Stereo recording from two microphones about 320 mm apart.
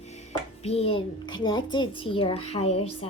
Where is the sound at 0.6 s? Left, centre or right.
Centre.